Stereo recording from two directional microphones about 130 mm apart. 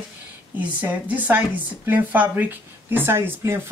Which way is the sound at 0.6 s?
10° right (ahead or behind).